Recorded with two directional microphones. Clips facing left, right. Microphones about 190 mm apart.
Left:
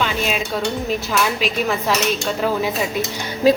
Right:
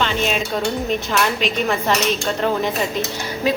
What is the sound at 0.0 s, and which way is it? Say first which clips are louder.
A woman's voice: right 1 dB; 5° left (ahead or behind).